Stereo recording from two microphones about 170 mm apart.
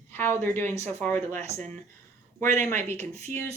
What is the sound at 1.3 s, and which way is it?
Speech, 45° right (ahead or behind).